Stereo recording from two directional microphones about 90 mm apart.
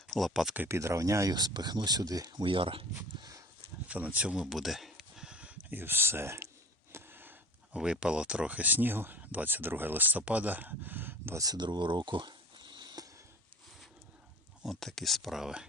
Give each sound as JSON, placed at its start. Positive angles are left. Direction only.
{"t": 0.1, "sound": "speech", "side_deg": 0}
{"t": 0.7, "sound": "speech", "side_deg": -35}
{"t": 2.4, "sound": "speech", "side_deg": -75}
{"t": 3.8, "sound": "a sound", "side_deg": -15}
{"t": 5.8, "sound": "speech", "side_deg": -25}
{"t": 6.9, "sound": "a sound", "side_deg": -25}
{"t": 7.8, "sound": "speech", "side_deg": -10}
{"t": 11.3, "sound": "a sound", "side_deg": -50}
{"t": 14.6, "sound": "speech", "side_deg": 5}